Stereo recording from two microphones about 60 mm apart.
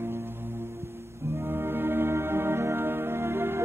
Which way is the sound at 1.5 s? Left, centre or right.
Right.